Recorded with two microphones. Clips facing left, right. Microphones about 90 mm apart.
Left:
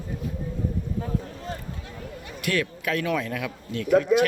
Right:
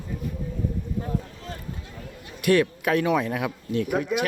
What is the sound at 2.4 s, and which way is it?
Speech, 25° right (ahead or behind).